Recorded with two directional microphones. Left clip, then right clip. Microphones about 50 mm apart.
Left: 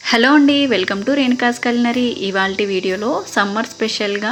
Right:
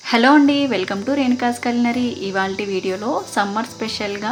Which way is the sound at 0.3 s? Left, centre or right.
Left.